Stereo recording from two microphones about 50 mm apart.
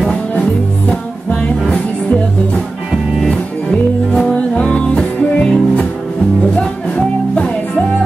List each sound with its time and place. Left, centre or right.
1.7 s music: left
3.7 s music: left